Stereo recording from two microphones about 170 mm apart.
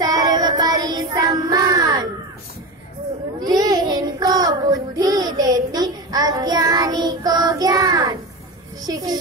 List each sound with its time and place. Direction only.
0.0 s child singing: 25° right (ahead or behind)
3.3 s child singing: 20° right (ahead or behind)
8.8 s a child's voice: 25° right (ahead or behind)